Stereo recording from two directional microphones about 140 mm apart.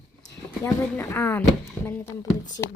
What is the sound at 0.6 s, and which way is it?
Speech, 20° left (ahead or behind).